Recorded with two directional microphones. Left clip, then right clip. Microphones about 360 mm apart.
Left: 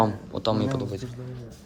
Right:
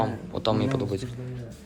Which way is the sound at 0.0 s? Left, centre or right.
Centre.